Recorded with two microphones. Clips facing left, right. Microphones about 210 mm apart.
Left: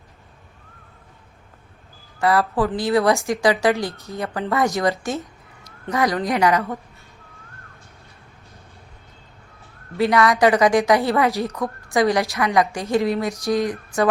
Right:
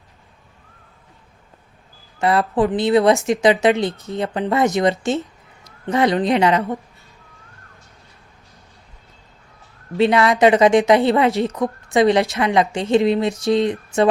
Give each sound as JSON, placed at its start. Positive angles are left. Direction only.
{"t": 2.1, "sound": "a woman's voice", "side_deg": -20}
{"t": 10.0, "sound": "a woman's voice", "side_deg": -25}